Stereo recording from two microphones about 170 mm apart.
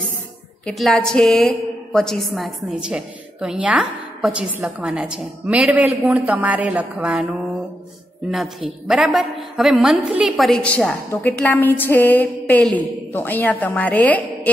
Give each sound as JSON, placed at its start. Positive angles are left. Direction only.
{"t": 0.7, "sound": "a woman's voice", "side_deg": 0}